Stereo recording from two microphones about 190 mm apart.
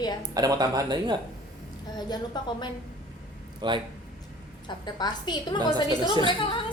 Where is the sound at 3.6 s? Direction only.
25° right (ahead or behind).